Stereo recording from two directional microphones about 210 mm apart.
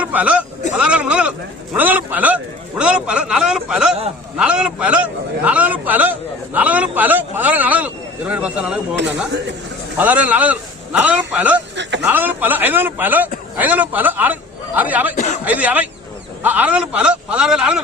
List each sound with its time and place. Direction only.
0.0 s a man's voice: 5° right (ahead or behind)
10.0 s a man's voice: 5° right (ahead or behind)
15.1 s speech: 35° left (ahead or behind)
15.4 s a man's voice: 5° right (ahead or behind)